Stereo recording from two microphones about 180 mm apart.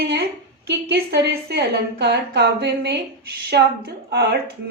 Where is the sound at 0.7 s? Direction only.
65° right (ahead or behind).